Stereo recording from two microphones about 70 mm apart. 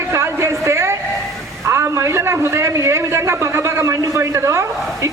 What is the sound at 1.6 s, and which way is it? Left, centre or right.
A man's voice, right.